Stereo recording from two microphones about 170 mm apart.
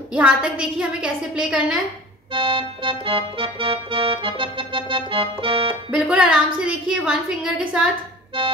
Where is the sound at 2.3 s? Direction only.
30° right (ahead or behind).